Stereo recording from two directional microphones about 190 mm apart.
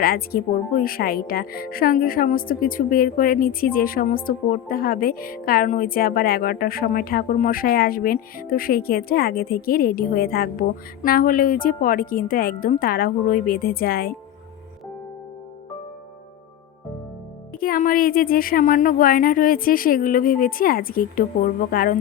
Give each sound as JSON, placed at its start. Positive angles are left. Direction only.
{"t": 0.0, "sound": "speech", "side_deg": 50}
{"t": 17.6, "sound": "speech", "side_deg": 45}